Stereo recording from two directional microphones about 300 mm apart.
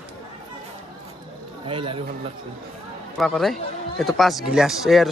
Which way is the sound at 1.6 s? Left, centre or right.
Centre.